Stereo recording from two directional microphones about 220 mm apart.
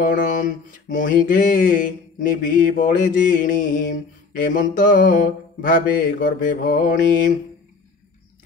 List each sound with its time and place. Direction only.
0.0 s mantra: 35° left (ahead or behind)